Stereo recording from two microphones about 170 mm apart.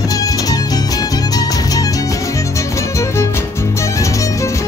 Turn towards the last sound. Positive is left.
turn(degrees=20)  # may be behind; listen again after turning